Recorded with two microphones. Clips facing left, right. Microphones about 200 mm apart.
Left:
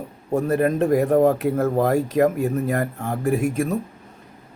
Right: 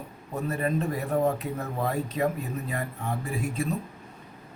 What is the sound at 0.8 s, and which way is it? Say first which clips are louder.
Speech: left 11 dB; 80° left.